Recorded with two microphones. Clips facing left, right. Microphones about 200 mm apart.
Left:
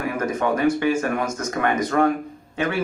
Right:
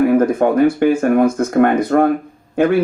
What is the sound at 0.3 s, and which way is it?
Speech, 55° right (ahead or behind).